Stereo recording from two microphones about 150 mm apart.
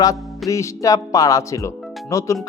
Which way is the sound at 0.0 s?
20° left (ahead or behind).